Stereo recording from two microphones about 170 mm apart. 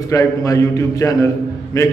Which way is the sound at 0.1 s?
20° left (ahead or behind).